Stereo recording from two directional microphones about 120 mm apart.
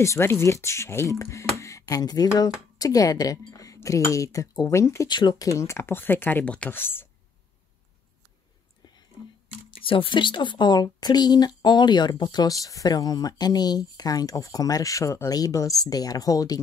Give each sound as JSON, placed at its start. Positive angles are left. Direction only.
{"t": 0.0, "sound": "speech", "side_deg": 20}
{"t": 5.0, "sound": "speech", "side_deg": 35}
{"t": 8.8, "sound": "whispering", "side_deg": 40}
{"t": 9.7, "sound": "speech", "side_deg": 45}